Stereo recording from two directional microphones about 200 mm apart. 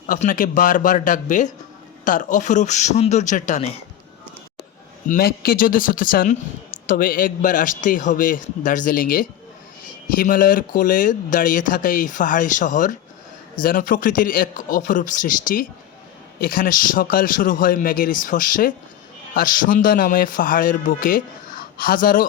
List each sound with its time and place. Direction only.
0.1 s speech: 40° left (ahead or behind)
5.0 s a man's voice: 45° left (ahead or behind)